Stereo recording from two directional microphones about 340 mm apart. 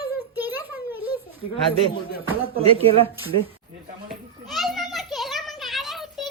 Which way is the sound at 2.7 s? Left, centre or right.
Centre.